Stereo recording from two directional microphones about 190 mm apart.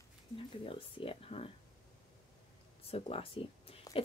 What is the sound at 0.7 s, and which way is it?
Speech, 30° left (ahead or behind).